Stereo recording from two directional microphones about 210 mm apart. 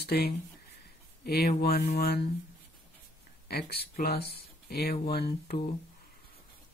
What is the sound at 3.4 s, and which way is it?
Speech, 50° left (ahead or behind).